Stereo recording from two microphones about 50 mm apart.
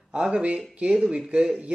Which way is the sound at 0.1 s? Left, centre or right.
Centre.